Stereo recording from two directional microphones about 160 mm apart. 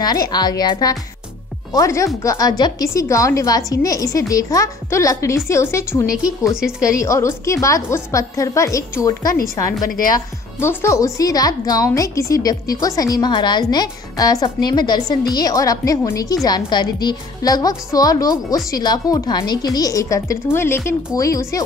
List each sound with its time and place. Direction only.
0.0 s a woman's voice: 25° left (ahead or behind)